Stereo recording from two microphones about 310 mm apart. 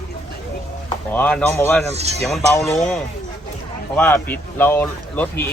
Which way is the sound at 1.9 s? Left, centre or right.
Right.